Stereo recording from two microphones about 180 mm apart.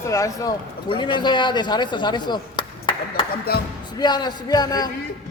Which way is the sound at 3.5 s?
60° left (ahead or behind).